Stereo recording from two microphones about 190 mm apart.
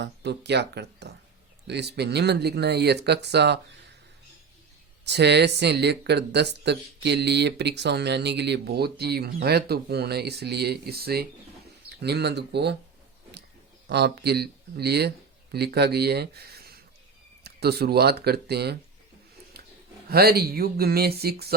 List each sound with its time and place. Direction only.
0.0 s speech: 65° right (ahead or behind)
5.0 s speech: 60° right (ahead or behind)
13.8 s speech: 60° right (ahead or behind)
20.1 s speech: 55° right (ahead or behind)